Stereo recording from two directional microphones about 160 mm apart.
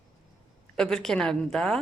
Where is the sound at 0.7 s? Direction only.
5° left (ahead or behind).